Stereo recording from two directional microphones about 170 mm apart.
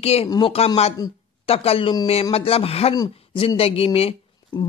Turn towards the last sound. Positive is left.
turn(degrees=30)  # may be behind; listen again after turning